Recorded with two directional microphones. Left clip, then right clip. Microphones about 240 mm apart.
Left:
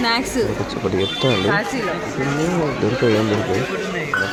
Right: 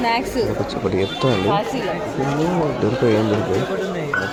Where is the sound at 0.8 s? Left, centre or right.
Centre.